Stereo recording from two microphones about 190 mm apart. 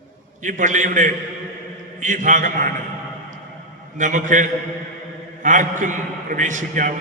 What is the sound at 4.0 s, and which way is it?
A man's voice, 40° right (ahead or behind).